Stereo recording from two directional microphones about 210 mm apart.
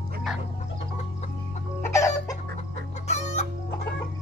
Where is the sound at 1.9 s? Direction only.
15° left (ahead or behind).